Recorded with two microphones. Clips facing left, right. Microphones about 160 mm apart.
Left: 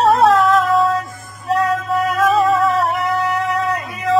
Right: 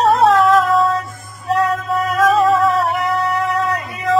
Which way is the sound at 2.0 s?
35° right (ahead or behind).